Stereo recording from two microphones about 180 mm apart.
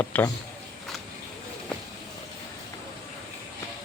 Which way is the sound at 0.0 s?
10° left (ahead or behind).